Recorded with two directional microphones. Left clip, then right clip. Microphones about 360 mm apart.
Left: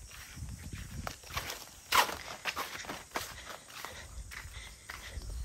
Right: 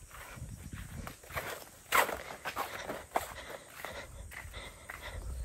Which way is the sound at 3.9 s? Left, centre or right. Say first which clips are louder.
Right 2 dB; centre.